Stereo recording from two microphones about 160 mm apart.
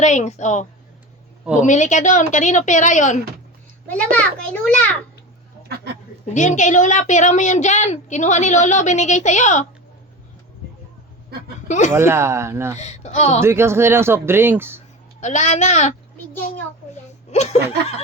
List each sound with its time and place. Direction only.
0.0 s a woman's voice: 50° left (ahead or behind)
3.8 s a child's voice: 10° left (ahead or behind)
5.6 s a sound: 90° right
6.3 s a woman's voice: 50° left (ahead or behind)
11.9 s speech: 15° right (ahead or behind)
12.7 s a woman's voice: 45° left (ahead or behind)
13.4 s speech: 15° right (ahead or behind)
15.2 s a woman's voice: 50° left (ahead or behind)
17.3 s speech: 40° left (ahead or behind)